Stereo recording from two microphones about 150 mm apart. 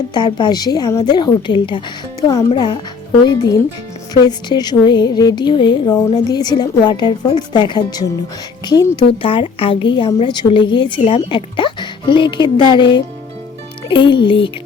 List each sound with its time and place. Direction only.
0.1 s music: 30° left (ahead or behind)
2.5 s a woman's voice: 30° left (ahead or behind)
3.2 s music: 25° left (ahead or behind)
9.2 s a woman's voice: 35° left (ahead or behind)